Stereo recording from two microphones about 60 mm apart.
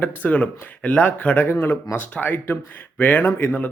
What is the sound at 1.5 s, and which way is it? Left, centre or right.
Speech, left.